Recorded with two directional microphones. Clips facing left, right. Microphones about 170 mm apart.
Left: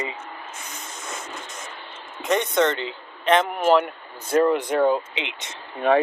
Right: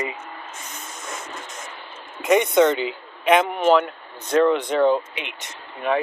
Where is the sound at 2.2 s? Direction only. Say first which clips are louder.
Right 4 dB; 10° right (ahead or behind).